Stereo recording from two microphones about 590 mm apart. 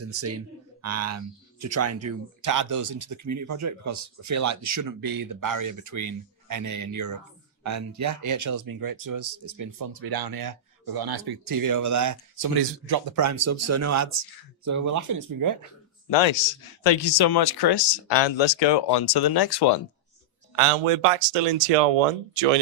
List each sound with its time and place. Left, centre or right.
0.0 s speech: right
16.0 s speech: left
20.6 s speech: right